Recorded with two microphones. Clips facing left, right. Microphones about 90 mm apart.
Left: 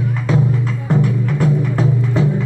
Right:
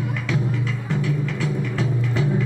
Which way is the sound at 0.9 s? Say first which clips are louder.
Left 8 dB; 45° left (ahead or behind).